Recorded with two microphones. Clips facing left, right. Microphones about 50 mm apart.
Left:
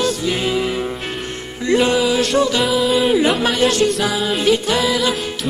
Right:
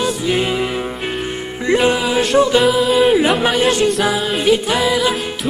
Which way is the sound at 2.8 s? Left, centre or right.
Centre.